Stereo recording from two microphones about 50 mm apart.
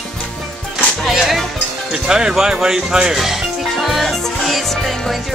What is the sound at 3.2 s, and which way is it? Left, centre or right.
Music, centre.